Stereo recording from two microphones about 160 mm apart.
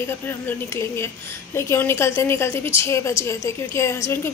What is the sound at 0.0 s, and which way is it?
A woman's voice, 15° left (ahead or behind).